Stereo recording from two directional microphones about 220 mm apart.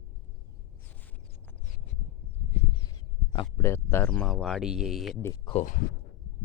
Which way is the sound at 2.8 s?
15° left (ahead or behind).